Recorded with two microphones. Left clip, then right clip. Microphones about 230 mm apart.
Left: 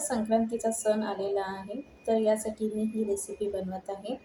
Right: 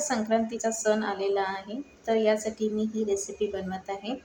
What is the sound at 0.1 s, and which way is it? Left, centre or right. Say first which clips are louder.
A woman's voice: left 1 dB; right.